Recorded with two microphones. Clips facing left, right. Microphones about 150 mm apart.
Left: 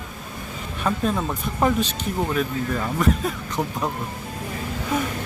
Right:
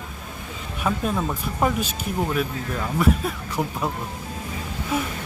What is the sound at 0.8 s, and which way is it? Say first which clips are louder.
Speech: left 1 dB; 5° right (ahead or behind).